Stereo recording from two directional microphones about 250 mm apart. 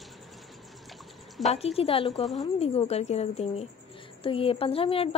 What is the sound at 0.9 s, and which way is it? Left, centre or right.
Pour, centre.